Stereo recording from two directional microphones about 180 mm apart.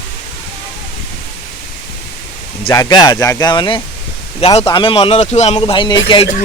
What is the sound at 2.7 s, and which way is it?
Speech, 20° left (ahead or behind).